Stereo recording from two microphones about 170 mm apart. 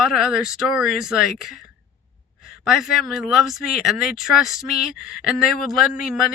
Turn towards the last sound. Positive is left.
turn(degrees=-5)  # may be behind; listen again after turning